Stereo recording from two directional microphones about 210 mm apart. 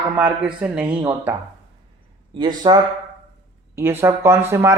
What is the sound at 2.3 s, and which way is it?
Speech, 20° right (ahead or behind).